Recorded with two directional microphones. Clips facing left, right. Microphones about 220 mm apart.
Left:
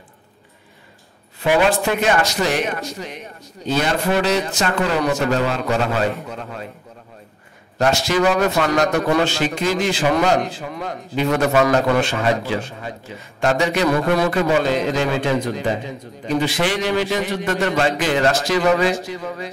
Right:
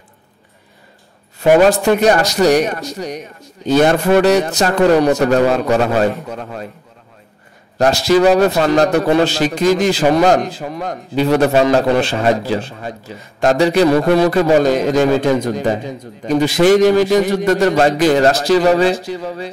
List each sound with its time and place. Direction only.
1.4 s a man's voice: 45° right (ahead or behind)
7.8 s a man's voice: 35° right (ahead or behind)